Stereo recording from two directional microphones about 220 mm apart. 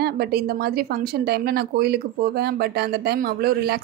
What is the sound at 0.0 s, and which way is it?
Speech, 45° right (ahead or behind).